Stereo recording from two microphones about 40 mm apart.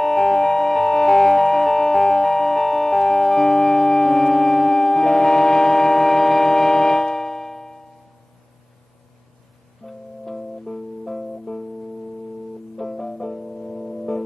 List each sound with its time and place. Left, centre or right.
0.0 s music: centre
9.8 s music: centre
12.7 s music: centre